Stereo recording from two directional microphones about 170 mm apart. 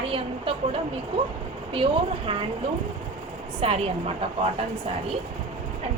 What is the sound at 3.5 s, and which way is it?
Speech, 35° right (ahead or behind).